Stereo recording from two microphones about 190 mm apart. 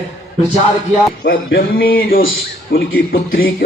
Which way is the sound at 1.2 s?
60° left (ahead or behind).